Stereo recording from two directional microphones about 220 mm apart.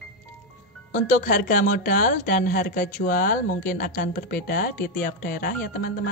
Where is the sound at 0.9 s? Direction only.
35° left (ahead or behind).